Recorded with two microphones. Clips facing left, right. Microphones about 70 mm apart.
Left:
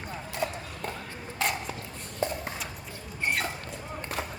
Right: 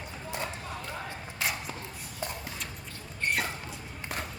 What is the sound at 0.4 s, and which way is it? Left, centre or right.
Run, centre.